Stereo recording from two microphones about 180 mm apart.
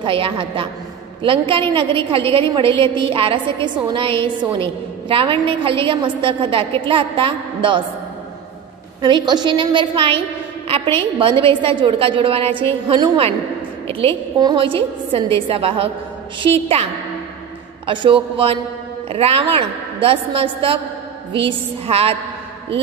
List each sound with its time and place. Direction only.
0.0 s a woman's voice: 30° right (ahead or behind)
9.0 s a woman's voice: 25° right (ahead or behind)
17.8 s a woman's voice: 30° right (ahead or behind)